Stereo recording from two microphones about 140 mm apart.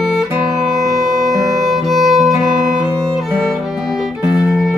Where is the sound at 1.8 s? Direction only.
Centre (ahead or behind).